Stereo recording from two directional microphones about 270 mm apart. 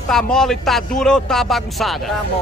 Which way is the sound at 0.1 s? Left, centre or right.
Centre.